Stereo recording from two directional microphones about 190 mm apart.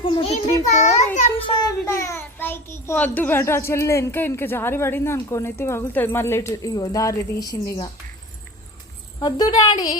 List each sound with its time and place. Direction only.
0.0 s a sound: 25° left (ahead or behind)
1.9 s a child's voice: 15° left (ahead or behind)
9.1 s speech: 20° left (ahead or behind)